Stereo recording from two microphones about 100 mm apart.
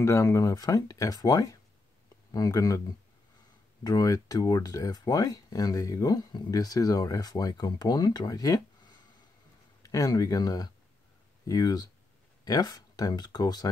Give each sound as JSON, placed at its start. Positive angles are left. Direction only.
{"t": 0.0, "sound": "speech", "side_deg": 30}
{"t": 3.8, "sound": "speech", "side_deg": 35}